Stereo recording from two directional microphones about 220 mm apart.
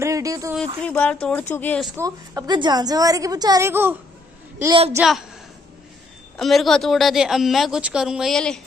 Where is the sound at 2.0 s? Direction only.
15° right (ahead or behind).